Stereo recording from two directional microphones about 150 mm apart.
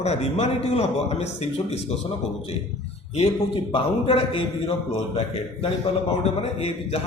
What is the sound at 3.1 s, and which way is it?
Mantra, 40° left (ahead or behind).